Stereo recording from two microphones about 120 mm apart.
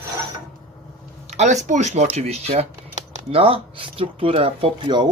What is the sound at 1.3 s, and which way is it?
Speech, 75° right (ahead or behind).